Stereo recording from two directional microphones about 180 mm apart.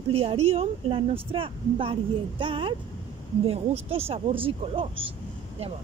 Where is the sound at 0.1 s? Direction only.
35° right (ahead or behind).